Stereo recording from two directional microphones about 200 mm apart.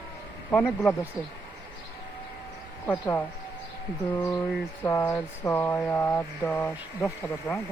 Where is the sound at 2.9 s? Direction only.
10° left (ahead or behind).